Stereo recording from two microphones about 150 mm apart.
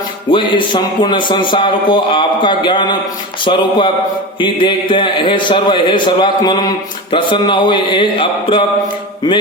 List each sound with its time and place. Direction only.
0.3 s speech: 35° left (ahead or behind)
9.2 s music: 25° left (ahead or behind)